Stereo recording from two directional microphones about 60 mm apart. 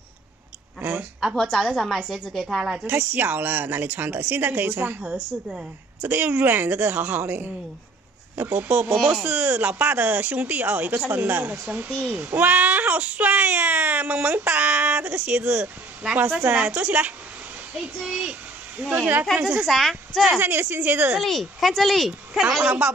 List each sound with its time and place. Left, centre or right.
0.7 s a sound: right
1.3 s a woman's voice: centre
2.8 s a woman's voice: right
5.5 s a woman's voice: centre
6.0 s a woman's voice: right
18.0 s a child's voice: centre
19.6 s speech: centre
20.3 s a woman's voice: right
21.2 s speech: centre